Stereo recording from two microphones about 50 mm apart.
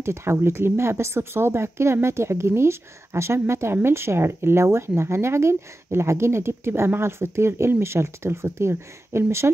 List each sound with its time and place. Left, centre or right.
0.0 s speech: right